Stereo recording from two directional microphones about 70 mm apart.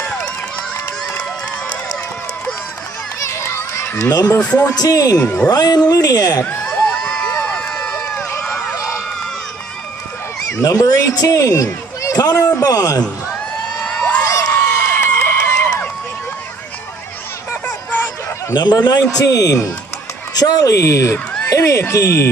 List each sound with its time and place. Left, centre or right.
3.3 s children playing: left
4.1 s a man's voice: left
6.7 s run: centre
8.2 s run: left
8.7 s crowd: left
10.5 s a man's voice: left
13.8 s crowd: centre
14.2 s crowd: left
14.5 s a sound: left
18.5 s speech: left
19.1 s a man's voice: left
20.3 s speech: left
20.8 s speech: left